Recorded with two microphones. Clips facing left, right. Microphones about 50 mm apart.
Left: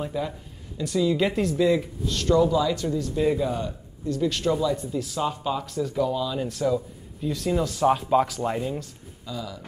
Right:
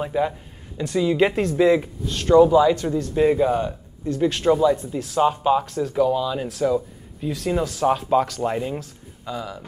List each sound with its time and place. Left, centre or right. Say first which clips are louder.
0.0 s speech: right 6 dB; right
6.6 s a sound: right 4 dB; right
7.2 s speech: right 2 dB; centre
8.4 s speech: right 3 dB; centre
9.2 s speech: right 4 dB; right